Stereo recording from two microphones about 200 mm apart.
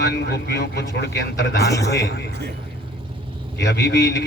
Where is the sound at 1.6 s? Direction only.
15° left (ahead or behind).